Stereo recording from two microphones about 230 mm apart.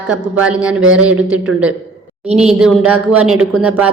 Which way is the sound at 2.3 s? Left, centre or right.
Right.